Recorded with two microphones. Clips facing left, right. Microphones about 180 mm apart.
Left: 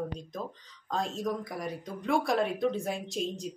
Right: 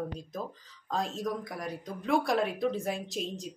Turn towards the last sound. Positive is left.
turn(degrees=0)  # may be behind; listen again after turning